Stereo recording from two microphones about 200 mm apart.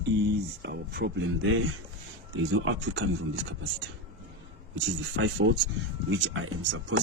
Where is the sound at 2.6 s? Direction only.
65° right (ahead or behind).